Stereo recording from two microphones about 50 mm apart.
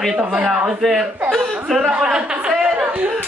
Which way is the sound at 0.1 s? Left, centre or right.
Right.